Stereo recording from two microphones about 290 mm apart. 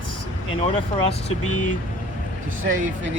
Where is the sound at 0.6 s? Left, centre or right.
Centre.